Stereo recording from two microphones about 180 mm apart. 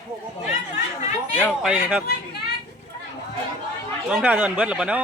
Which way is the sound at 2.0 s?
65° left (ahead or behind).